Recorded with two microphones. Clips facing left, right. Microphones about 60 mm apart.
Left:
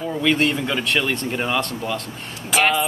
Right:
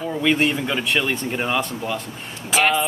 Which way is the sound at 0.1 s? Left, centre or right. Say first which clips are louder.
Even; centre.